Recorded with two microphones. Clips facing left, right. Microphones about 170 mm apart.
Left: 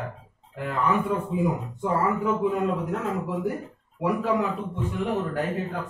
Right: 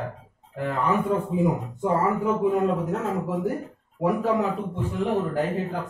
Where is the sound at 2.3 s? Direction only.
40° right (ahead or behind).